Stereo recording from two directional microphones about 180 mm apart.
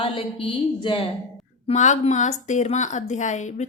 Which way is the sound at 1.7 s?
40° left (ahead or behind).